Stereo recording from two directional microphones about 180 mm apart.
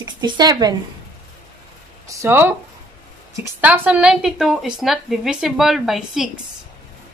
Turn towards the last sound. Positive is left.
turn(degrees=-5)  # may be behind; listen again after turning